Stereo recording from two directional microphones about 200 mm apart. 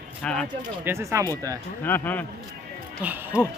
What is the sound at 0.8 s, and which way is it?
Speech, 15° right (ahead or behind).